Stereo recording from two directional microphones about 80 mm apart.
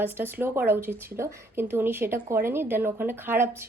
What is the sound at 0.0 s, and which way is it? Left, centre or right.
Speech, right.